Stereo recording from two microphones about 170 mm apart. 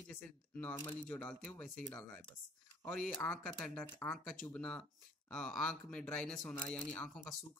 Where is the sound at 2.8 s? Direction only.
5° left (ahead or behind).